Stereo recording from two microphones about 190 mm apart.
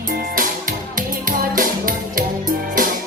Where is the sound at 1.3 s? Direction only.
45° right (ahead or behind).